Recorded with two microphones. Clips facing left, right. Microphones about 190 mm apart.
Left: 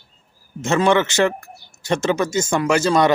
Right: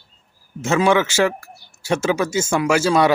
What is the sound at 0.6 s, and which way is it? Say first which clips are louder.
Speech: even; 5° right (ahead or behind).